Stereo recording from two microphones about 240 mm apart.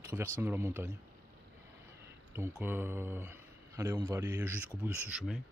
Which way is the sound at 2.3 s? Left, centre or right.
Centre.